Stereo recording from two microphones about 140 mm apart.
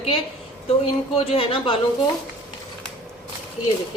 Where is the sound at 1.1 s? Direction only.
40° left (ahead or behind).